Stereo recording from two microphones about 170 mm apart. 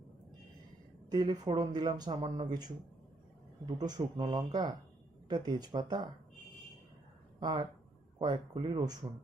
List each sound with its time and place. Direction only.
1.1 s speech: 25° right (ahead or behind)
3.8 s speech: 25° right (ahead or behind)
7.3 s speech: 25° right (ahead or behind)